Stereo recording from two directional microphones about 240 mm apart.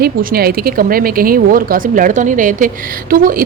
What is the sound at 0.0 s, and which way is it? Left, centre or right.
Speech, right.